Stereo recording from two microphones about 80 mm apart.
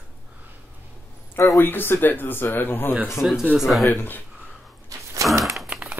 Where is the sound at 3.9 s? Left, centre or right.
Left.